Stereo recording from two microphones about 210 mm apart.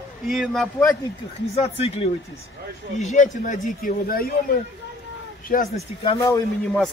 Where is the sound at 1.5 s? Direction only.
30° left (ahead or behind).